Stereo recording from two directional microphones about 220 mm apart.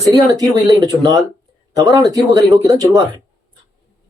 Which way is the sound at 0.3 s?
15° right (ahead or behind).